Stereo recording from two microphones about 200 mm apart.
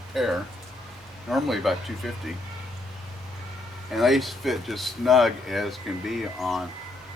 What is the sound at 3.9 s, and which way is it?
Speech, centre (ahead or behind).